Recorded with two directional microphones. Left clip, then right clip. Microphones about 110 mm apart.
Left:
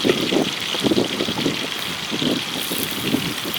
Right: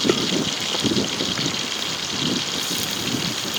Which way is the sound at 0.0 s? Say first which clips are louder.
Left 2 dB; centre (ahead or behind).